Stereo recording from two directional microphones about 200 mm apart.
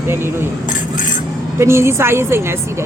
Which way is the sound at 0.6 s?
40° left (ahead or behind).